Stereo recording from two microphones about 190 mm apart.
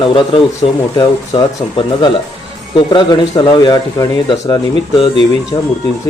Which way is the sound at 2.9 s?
20° left (ahead or behind).